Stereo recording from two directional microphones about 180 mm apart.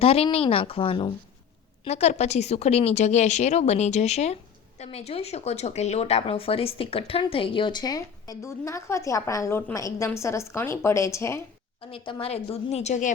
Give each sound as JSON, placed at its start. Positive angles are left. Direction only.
{"t": 0.0, "sound": "a woman's voice", "side_deg": 35}
{"t": 11.8, "sound": "speech", "side_deg": 30}